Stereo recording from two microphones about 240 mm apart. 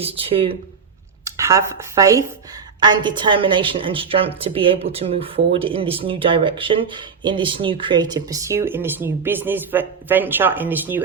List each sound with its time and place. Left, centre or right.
0.0 s a woman's voice: right
1.2 s a woman's voice: centre